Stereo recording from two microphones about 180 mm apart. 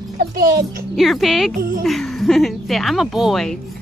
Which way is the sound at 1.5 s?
55° right (ahead or behind).